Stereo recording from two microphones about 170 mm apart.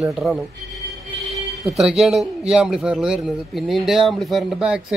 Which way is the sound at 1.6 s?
Centre (ahead or behind).